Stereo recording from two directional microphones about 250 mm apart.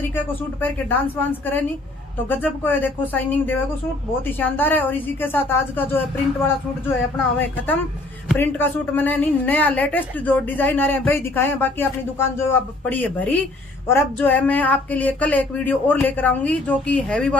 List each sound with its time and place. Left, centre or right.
0.1 s a woman's voice: centre
2.2 s a woman's voice: centre